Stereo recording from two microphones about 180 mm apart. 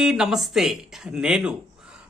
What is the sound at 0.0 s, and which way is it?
Speech, centre (ahead or behind).